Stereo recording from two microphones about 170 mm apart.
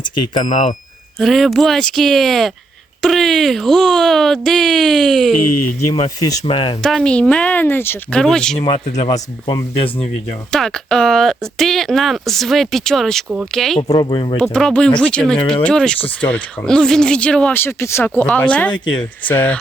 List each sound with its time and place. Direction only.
0.0 s speech: 25° left (ahead or behind)
1.2 s speech: centre (ahead or behind)
5.9 s speech: 25° left (ahead or behind)
6.8 s speech: 5° left (ahead or behind)
8.6 s speech: 30° left (ahead or behind)
10.5 s speech: 5° left (ahead or behind)
13.9 s speech: 25° left (ahead or behind)
14.3 s speech: 5° left (ahead or behind)